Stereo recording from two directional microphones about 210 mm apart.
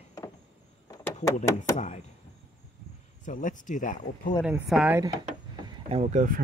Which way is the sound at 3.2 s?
40° left (ahead or behind).